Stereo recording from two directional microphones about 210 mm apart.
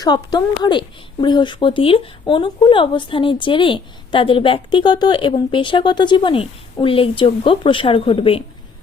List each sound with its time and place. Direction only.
0.0 s speech: 20° left (ahead or behind)